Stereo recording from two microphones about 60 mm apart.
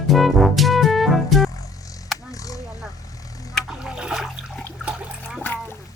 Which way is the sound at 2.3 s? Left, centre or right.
Left.